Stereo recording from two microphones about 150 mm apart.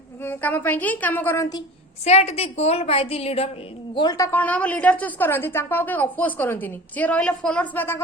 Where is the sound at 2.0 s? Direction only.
45° left (ahead or behind).